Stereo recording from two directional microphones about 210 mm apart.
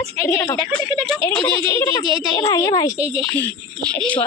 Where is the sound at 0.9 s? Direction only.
Centre (ahead or behind).